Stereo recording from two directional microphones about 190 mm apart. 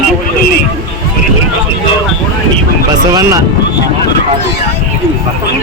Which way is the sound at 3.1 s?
20° right (ahead or behind).